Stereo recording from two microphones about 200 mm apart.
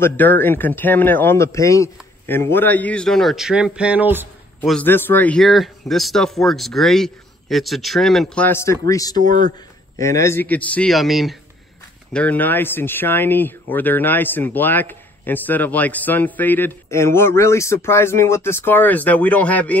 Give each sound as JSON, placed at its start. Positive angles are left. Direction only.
{"t": 0.0, "sound": "a man's voice", "side_deg": 10}
{"t": 4.6, "sound": "speech", "side_deg": 10}
{"t": 9.1, "sound": "a man's voice", "side_deg": -45}
{"t": 9.9, "sound": "a man's voice", "side_deg": 15}